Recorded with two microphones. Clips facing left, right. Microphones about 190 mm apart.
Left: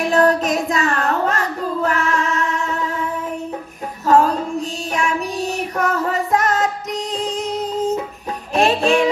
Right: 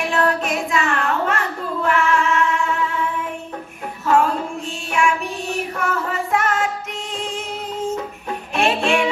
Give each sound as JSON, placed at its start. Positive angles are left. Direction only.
{"t": 0.1, "sound": "child singing", "side_deg": 40}
{"t": 1.9, "sound": "music", "side_deg": 40}
{"t": 4.0, "sound": "female singing", "side_deg": 40}
{"t": 7.2, "sound": "music", "side_deg": 40}